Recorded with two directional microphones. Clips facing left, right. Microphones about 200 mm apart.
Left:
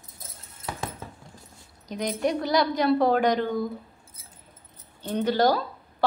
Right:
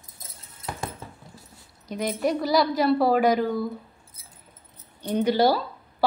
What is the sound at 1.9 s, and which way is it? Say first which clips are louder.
A woman's voice: right 1 dB; 5° right (ahead or behind).